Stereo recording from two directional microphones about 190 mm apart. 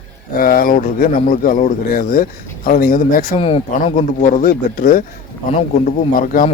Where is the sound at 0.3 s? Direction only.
50° left (ahead or behind).